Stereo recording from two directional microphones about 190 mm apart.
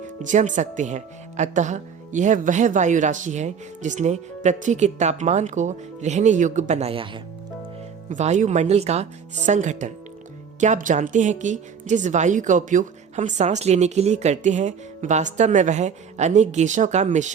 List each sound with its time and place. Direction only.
0.2 s a woman's voice: 40° right (ahead or behind)
8.1 s a woman's voice: 40° right (ahead or behind)